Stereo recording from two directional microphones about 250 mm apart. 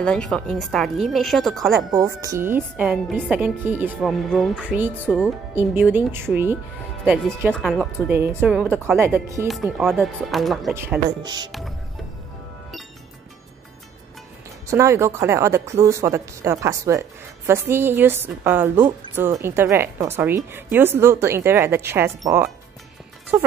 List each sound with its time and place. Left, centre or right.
0.0 s a woman's voice: centre
2.0 s a woman's voice: centre
14.7 s a woman's voice: centre